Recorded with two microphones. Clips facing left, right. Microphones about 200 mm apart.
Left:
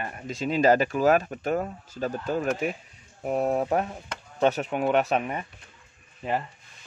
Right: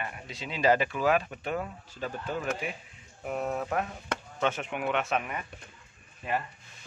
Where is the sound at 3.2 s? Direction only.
35° left (ahead or behind).